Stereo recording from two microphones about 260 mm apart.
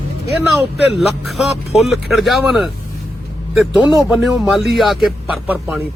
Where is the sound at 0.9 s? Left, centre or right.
Centre.